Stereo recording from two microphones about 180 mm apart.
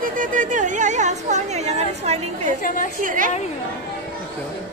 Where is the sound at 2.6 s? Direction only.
45° left (ahead or behind).